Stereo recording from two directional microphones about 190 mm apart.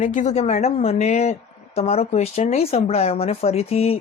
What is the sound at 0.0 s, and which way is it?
A woman's voice, 40° left (ahead or behind).